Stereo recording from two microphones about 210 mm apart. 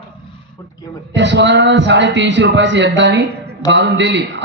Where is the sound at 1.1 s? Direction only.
55° right (ahead or behind).